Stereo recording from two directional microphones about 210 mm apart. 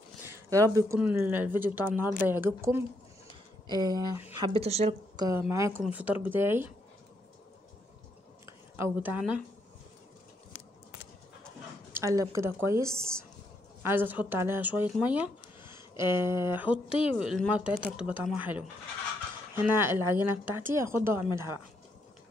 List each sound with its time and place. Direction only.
0.2 s speech: 15° right (ahead or behind)
4.6 s speech: 30° right (ahead or behind)
5.2 s speech: 15° right (ahead or behind)
8.7 s speech: 10° right (ahead or behind)
11.9 s a woman's voice: 15° right (ahead or behind)
16.7 s speech: 25° left (ahead or behind)
17.2 s speech: centre (ahead or behind)